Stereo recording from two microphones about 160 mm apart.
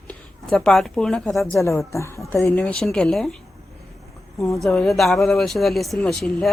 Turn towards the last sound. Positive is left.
turn(degrees=0)  # may be behind; listen again after turning